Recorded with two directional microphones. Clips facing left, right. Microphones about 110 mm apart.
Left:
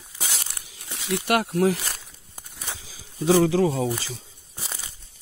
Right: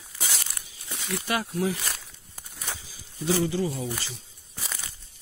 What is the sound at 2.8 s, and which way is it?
Speech, 90° left.